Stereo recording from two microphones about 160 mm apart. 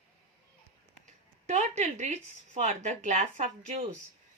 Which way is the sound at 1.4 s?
45° right (ahead or behind).